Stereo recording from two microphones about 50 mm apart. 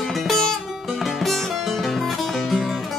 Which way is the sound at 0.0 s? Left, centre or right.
Centre.